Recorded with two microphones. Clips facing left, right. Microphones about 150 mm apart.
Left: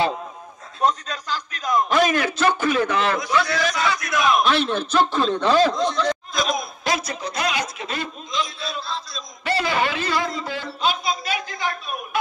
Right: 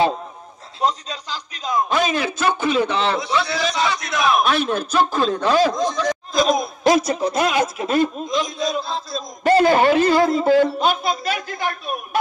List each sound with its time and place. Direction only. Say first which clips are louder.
1.9 s a man's voice: left 1 dB; 10° right (ahead or behind)
6.3 s a man's voice: right 6 dB; 40° right (ahead or behind)